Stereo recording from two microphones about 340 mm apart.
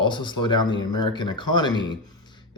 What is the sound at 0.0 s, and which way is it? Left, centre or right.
Speech, centre.